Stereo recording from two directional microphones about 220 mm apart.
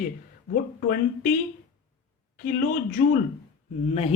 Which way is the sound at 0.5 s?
40° left (ahead or behind).